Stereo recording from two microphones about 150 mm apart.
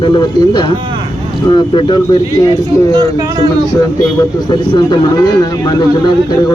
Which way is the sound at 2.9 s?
25° right (ahead or behind).